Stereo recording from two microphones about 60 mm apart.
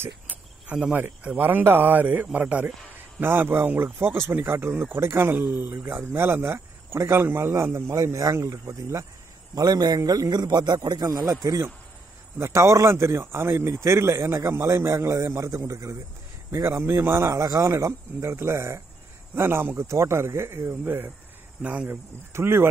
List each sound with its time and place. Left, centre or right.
0.7 s speech: right
3.2 s speech: right
6.1 s a man's voice: right
9.6 s a man's voice: right
12.4 s a man's voice: right
16.6 s a man's voice: right
17.4 s speech: right
17.6 s a man's voice: right